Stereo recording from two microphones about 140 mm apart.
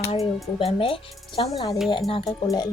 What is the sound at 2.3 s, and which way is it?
Speech, 30° left (ahead or behind).